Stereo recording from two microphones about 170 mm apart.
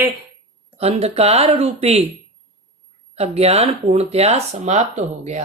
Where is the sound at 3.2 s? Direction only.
35° right (ahead or behind).